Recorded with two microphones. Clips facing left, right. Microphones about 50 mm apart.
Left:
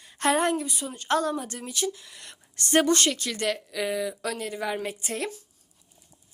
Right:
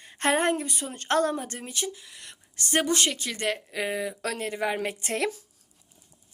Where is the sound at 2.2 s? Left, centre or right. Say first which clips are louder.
Right 2 dB; centre; by 4.2 s right.